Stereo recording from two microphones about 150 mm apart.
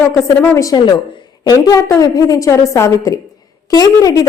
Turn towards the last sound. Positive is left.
turn(degrees=25)  # may be behind; listen again after turning